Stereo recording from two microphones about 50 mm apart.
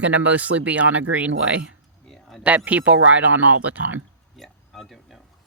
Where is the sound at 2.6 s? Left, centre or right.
Right.